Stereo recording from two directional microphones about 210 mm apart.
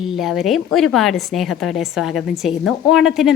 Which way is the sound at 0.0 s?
Centre (ahead or behind).